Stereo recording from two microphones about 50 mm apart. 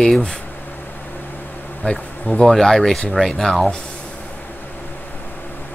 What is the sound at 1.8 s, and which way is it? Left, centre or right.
Speech, left.